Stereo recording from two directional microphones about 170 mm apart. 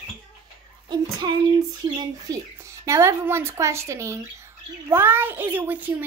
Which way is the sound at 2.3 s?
20° right (ahead or behind).